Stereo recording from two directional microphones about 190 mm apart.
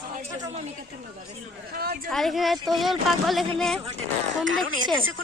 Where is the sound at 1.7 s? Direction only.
50° right (ahead or behind).